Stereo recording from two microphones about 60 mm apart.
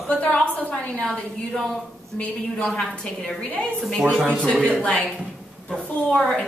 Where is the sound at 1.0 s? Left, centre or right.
Centre.